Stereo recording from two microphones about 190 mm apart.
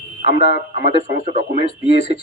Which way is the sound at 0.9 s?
40° right (ahead or behind).